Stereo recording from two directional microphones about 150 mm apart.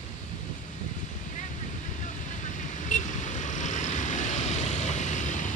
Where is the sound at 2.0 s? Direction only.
55° left (ahead or behind).